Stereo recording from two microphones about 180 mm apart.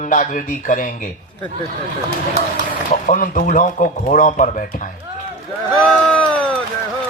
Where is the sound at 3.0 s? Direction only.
45° left (ahead or behind).